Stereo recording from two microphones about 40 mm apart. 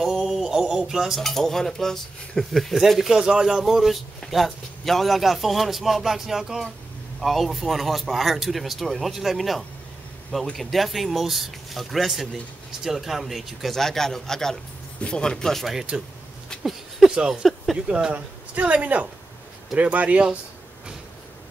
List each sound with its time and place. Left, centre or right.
0.0 s a sound: centre
1.2 s speech: centre
3.0 s a man's voice: centre
13.7 s speech: centre
15.0 s speech: left
15.6 s a man's voice: centre
17.3 s speech: centre
17.8 s speech: right
18.1 s speech: right